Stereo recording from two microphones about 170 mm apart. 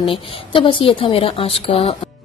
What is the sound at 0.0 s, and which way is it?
A woman's voice, 30° left (ahead or behind).